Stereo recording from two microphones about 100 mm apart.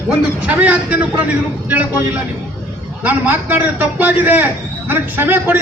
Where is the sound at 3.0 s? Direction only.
20° right (ahead or behind).